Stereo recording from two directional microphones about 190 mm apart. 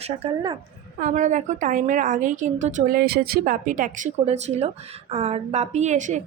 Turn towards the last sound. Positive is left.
turn(degrees=-40)  # may be behind; listen again after turning